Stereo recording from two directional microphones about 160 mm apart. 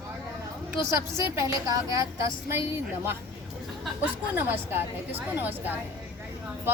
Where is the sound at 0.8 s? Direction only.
15° right (ahead or behind).